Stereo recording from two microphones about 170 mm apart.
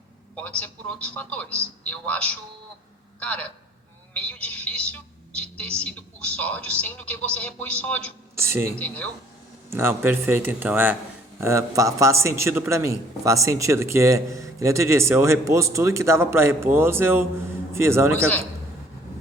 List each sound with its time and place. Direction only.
0.3 s a man's voice: 10° left (ahead or behind)
8.4 s a man's voice: 15° right (ahead or behind)
8.7 s a man's voice: 10° left (ahead or behind)
9.6 s a man's voice: 15° right (ahead or behind)